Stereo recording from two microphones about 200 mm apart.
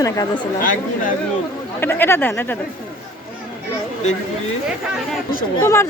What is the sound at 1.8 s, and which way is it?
Speech, 10° left (ahead or behind).